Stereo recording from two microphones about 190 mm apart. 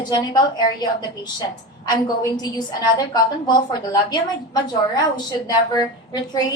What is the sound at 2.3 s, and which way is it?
A woman's voice, 20° left (ahead or behind).